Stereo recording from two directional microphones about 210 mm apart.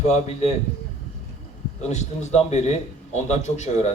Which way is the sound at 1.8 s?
35° left (ahead or behind).